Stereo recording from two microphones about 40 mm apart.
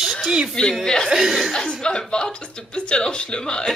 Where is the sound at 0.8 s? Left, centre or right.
Centre.